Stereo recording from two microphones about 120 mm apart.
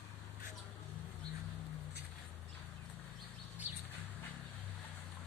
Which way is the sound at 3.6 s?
15° right (ahead or behind).